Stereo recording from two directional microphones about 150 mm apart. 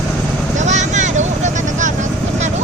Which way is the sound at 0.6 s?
50° right (ahead or behind).